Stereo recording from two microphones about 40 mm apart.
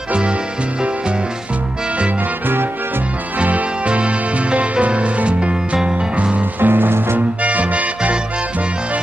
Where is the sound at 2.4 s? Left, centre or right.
Right.